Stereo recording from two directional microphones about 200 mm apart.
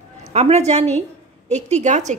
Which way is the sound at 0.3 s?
35° right (ahead or behind).